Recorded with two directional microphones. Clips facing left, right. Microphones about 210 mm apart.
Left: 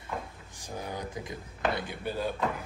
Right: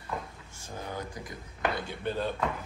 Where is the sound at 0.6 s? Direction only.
15° left (ahead or behind).